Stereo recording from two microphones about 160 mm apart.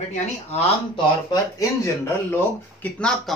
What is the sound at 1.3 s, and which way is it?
Speech, 15° left (ahead or behind).